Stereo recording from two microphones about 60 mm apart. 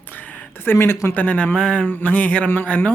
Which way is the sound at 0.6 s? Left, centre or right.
Left.